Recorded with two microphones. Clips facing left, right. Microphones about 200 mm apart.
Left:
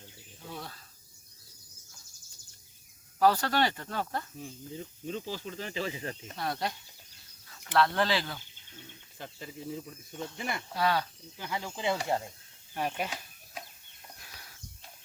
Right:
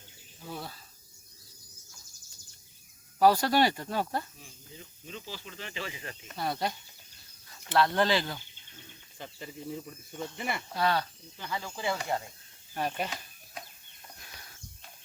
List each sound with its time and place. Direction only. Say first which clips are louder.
0.4 s cricket: right 2 dB; 5° right (ahead or behind)
3.2 s speech: right 2 dB; 10° right (ahead or behind)
4.8 s speech: left 7 dB; 40° left (ahead or behind)
6.3 s speech: right 3 dB; centre (ahead or behind)
7.8 s speech: right 1 dB; centre (ahead or behind)
10.8 s speech: even; 10° left (ahead or behind)
12.7 s chicken: right 1 dB; 5° left (ahead or behind)